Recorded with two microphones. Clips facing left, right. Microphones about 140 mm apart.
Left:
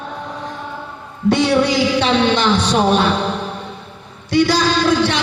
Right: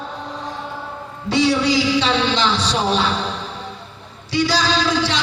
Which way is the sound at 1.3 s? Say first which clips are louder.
Left 3 dB; 55° left (ahead or behind).